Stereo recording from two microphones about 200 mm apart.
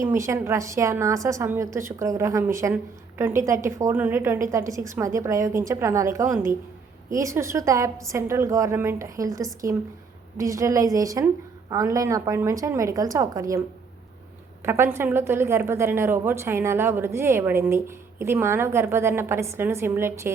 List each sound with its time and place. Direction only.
0.0 s a woman's voice: 15° right (ahead or behind)
14.6 s a woman's voice: 10° right (ahead or behind)